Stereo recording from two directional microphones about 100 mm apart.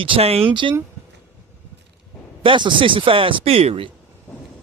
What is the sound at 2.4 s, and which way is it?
Speech, 55° right (ahead or behind).